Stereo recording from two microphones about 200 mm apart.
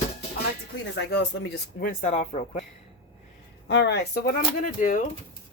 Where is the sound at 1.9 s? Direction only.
30° left (ahead or behind).